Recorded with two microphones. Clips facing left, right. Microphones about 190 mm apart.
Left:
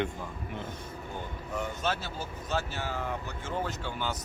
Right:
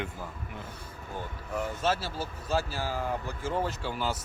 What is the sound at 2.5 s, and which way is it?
Speech, 35° right (ahead or behind).